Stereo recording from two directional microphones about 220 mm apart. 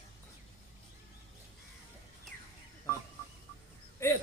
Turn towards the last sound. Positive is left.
turn(degrees=10)  # may be behind; listen again after turning